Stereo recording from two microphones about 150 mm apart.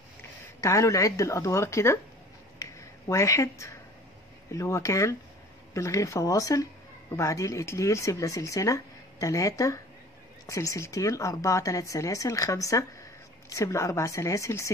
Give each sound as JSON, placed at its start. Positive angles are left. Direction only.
{"t": 0.6, "sound": "speech", "side_deg": 20}
{"t": 2.6, "sound": "a sound", "side_deg": 20}
{"t": 4.5, "sound": "speech", "side_deg": 20}